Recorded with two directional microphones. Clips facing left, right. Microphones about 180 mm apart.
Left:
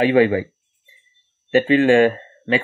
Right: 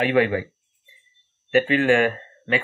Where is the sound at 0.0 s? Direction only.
25° left (ahead or behind).